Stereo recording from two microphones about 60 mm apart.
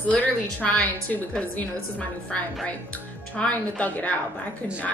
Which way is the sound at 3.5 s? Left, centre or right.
Left.